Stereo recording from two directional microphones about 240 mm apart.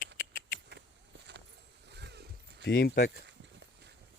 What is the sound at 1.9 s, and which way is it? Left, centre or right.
Vehicle, right.